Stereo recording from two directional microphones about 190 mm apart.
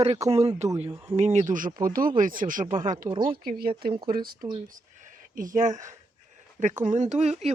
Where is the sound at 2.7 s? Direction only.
20° right (ahead or behind).